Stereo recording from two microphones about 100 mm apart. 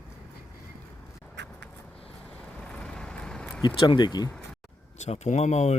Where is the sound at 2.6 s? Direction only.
10° left (ahead or behind).